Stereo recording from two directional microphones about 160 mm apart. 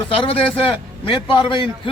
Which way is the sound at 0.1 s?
35° left (ahead or behind).